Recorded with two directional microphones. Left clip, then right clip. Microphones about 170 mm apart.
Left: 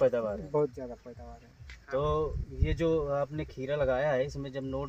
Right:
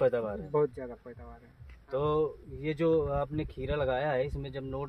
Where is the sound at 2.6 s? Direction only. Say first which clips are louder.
Right 2 dB; 45° right (ahead or behind).